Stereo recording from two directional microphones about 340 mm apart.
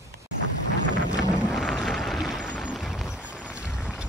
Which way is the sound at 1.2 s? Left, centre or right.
Centre.